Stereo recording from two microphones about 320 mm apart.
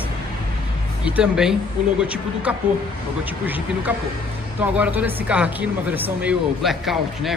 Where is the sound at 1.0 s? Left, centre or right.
Centre.